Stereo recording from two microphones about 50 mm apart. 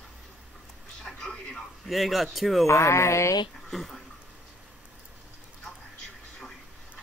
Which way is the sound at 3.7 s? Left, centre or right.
Centre.